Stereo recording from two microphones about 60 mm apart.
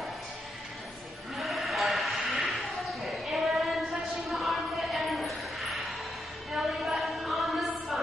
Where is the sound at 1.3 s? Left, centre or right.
Centre.